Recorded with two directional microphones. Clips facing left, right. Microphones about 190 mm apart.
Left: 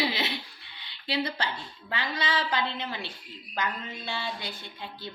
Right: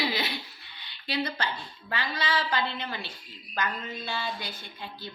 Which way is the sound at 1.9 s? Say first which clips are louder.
Even; 20° left (ahead or behind).